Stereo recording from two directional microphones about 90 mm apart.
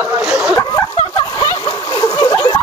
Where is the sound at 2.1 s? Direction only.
45° left (ahead or behind).